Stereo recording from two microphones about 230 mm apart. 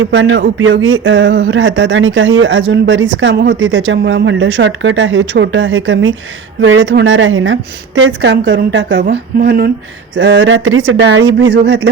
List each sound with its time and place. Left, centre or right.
0.0 s speech: right